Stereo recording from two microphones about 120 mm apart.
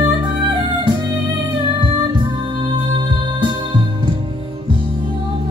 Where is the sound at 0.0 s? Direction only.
40° right (ahead or behind).